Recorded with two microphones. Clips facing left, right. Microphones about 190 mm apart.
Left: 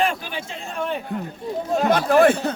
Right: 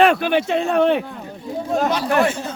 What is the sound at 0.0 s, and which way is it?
Speech, 70° right (ahead or behind).